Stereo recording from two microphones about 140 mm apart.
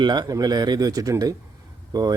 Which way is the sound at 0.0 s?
30° right (ahead or behind).